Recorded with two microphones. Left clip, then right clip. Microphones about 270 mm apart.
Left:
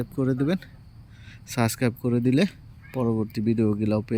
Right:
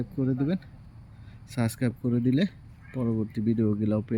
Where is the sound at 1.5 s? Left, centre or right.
Centre.